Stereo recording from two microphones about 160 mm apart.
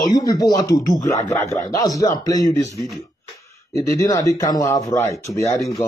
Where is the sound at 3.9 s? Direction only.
20° left (ahead or behind).